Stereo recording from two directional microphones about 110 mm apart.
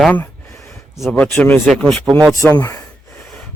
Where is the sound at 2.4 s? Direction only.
25° left (ahead or behind).